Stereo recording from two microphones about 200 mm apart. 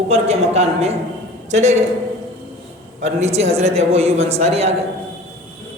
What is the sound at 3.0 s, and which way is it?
A woman's voice, 30° right (ahead or behind).